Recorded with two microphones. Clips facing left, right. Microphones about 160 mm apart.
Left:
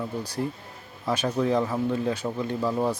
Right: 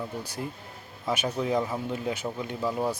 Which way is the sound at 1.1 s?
15° right (ahead or behind).